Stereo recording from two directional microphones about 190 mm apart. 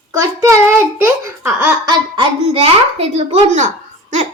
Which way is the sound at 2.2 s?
30° right (ahead or behind).